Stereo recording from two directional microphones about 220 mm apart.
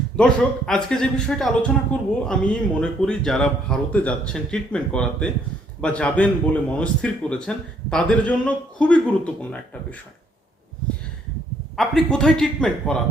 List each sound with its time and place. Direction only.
0.2 s speech: 5° left (ahead or behind)
11.8 s speech: centre (ahead or behind)